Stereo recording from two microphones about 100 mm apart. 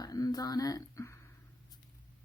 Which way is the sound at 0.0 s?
40° left (ahead or behind).